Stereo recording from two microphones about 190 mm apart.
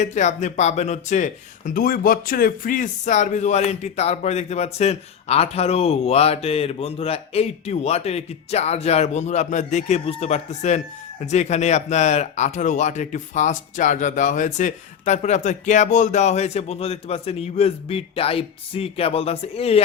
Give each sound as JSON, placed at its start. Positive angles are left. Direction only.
{"t": 0.0, "sound": "speech", "side_deg": 40}